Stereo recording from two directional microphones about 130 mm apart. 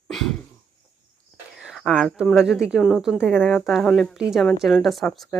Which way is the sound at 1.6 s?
Centre (ahead or behind).